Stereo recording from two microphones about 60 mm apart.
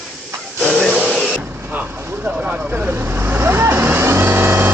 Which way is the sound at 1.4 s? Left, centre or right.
Right.